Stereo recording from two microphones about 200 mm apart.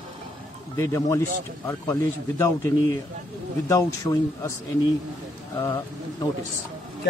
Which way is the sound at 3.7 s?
15° left (ahead or behind).